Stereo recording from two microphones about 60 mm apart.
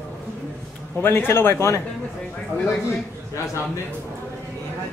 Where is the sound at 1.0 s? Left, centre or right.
Left.